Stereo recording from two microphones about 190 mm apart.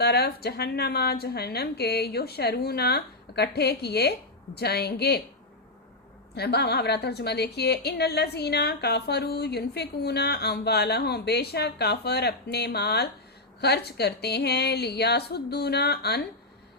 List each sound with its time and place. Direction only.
0.0 s a woman's voice: 60° left (ahead or behind)
6.3 s a woman's voice: 60° left (ahead or behind)